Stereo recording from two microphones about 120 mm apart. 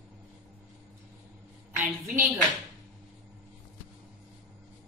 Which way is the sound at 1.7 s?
20° right (ahead or behind).